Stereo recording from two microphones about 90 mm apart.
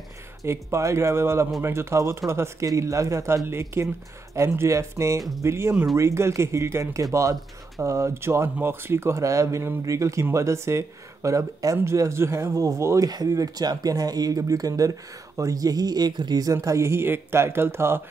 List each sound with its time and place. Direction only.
0.5 s speech: 30° right (ahead or behind); by 16.5 s 50° right (ahead or behind)
16.6 s speech: 35° right (ahead or behind)